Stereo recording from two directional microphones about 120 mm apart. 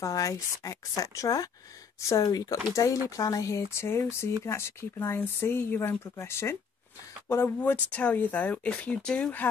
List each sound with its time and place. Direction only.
0.0 s speech: 25° left (ahead or behind); by 9.5 s 10° left (ahead or behind)